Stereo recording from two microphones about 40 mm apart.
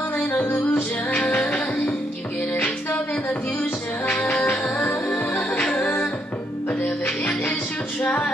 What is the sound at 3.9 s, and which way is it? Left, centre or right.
Music, left.